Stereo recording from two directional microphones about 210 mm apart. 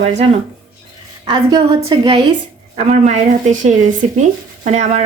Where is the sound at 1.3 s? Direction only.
20° right (ahead or behind).